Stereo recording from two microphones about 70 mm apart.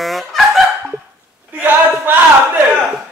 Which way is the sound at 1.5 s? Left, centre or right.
Right.